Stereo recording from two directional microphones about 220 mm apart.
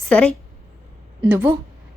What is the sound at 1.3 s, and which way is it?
Speech, 10° right (ahead or behind).